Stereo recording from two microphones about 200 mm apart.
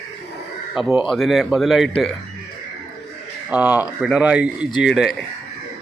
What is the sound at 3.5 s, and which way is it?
Speech, 5° right (ahead or behind).